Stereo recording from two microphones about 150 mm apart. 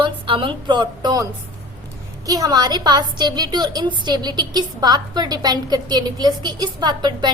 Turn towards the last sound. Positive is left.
turn(degrees=-30)  # may be behind; listen again after turning